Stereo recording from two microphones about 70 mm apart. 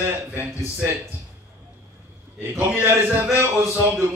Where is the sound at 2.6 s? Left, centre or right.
Right.